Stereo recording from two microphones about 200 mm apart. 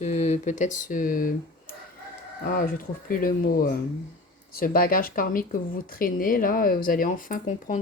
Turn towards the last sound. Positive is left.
turn(degrees=40)  # may be behind; listen again after turning